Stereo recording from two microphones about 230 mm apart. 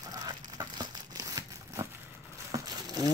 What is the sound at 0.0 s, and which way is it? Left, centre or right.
Crumpling, centre.